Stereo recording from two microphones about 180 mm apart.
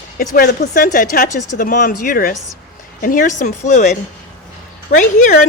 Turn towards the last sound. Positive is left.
turn(degrees=45)  # may be behind; listen again after turning